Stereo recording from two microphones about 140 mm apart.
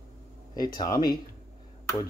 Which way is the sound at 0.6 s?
25° left (ahead or behind).